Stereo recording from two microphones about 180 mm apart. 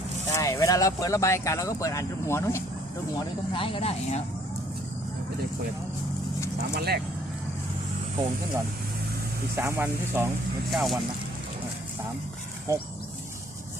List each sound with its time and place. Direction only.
0.3 s speech: 15° left (ahead or behind)
3.5 s speech: 30° left (ahead or behind)
6.7 s speech: 60° right (ahead or behind)
9.6 s speech: 15° right (ahead or behind)
10.7 s speech: centre (ahead or behind)
12.7 s speech: 15° right (ahead or behind)